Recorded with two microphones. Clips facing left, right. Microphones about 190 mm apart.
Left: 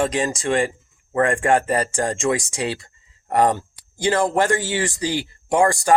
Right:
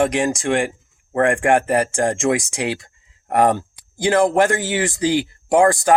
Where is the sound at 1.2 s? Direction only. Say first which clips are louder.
Right 3 dB; 15° right (ahead or behind).